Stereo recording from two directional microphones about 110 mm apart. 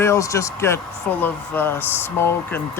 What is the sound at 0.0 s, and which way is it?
Speech, 25° left (ahead or behind).